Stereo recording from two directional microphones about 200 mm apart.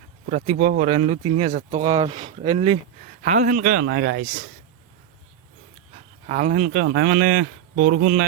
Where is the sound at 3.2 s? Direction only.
40° right (ahead or behind).